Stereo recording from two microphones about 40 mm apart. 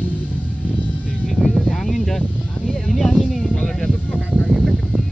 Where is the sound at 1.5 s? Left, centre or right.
Centre.